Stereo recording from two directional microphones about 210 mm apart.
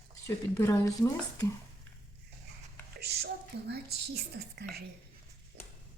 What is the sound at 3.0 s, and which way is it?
A woman's voice, 50° right (ahead or behind).